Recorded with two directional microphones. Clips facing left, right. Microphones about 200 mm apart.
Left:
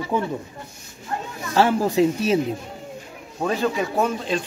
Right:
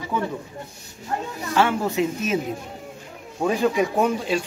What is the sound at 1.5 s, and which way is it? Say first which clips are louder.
Speech: left 3 dB; 35° left (ahead or behind).